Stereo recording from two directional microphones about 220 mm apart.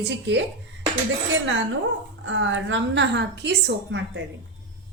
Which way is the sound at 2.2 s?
60° right (ahead or behind).